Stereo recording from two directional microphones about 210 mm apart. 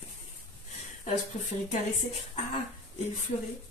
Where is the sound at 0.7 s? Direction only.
30° left (ahead or behind).